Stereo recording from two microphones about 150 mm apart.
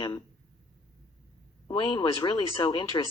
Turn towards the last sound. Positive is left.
turn(degrees=30)  # may be behind; listen again after turning